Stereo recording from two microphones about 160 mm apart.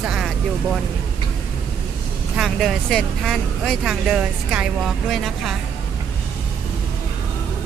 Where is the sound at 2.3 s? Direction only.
Centre (ahead or behind).